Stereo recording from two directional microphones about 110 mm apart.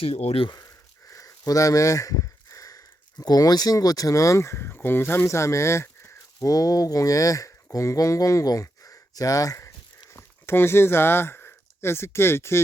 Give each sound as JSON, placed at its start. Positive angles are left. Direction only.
{"t": 0.0, "sound": "speech", "side_deg": 65}
{"t": 1.1, "sound": "speech", "side_deg": 30}